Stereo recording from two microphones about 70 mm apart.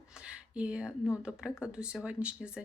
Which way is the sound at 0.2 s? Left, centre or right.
Centre.